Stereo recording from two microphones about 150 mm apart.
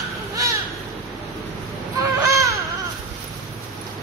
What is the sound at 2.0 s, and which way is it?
Caw, 20° right (ahead or behind).